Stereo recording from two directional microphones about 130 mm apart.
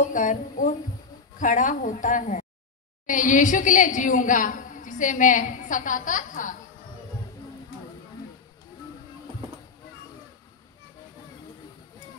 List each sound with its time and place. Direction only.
0.1 s a woman's voice: 85° left